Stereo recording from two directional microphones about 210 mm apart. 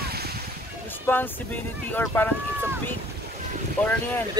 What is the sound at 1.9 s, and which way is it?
Speech, 10° left (ahead or behind).